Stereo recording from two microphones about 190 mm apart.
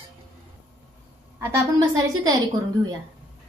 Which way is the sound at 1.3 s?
15° right (ahead or behind).